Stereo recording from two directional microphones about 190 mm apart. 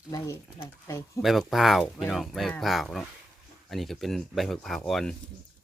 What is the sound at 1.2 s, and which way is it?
Speech, centre (ahead or behind).